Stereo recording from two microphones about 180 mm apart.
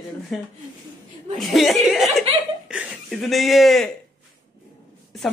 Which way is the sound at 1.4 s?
Centre (ahead or behind).